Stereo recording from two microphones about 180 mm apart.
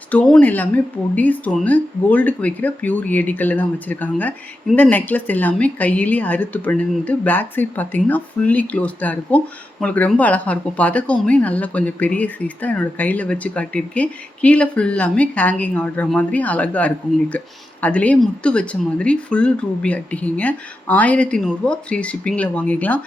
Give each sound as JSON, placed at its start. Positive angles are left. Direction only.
{"t": 0.1, "sound": "speech", "side_deg": 5}